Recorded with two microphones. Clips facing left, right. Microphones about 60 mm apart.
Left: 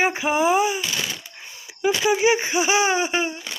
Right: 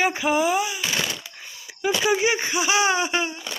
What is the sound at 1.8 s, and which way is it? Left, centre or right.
Speech, centre.